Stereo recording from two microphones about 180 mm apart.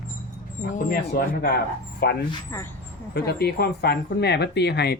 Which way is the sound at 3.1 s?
65° left (ahead or behind).